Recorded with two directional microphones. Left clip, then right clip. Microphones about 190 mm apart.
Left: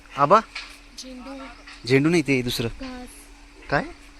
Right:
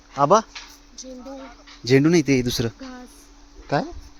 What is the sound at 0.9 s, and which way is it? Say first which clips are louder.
Speech: right 2 dB; 55° right (ahead or behind).